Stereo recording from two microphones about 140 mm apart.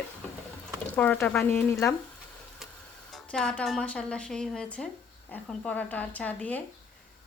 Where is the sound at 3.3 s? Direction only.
5° left (ahead or behind).